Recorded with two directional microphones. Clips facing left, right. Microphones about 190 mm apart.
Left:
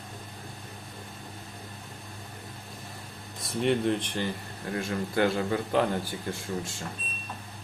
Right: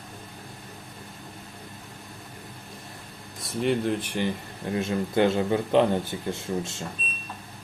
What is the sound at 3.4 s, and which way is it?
Speech, centre (ahead or behind).